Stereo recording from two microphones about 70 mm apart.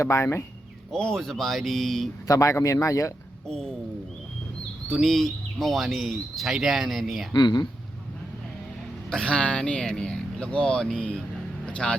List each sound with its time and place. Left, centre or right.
0.0 s speech: left
0.9 s speech: centre
2.2 s speech: left
3.4 s speech: centre
4.9 s speech: centre
7.3 s speech: left
9.0 s speech: centre
11.6 s music: centre